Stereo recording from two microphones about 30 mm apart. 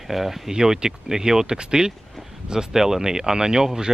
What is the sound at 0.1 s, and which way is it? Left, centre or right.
Speech, centre.